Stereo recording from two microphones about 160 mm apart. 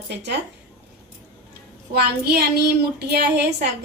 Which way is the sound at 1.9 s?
80° right.